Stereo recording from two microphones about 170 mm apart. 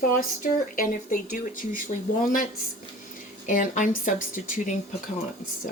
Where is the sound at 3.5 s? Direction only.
50° left (ahead or behind).